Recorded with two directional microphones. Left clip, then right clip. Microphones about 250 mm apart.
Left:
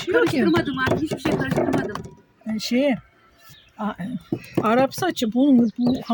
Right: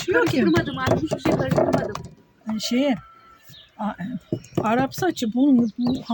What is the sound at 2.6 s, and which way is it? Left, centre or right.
Speech, centre.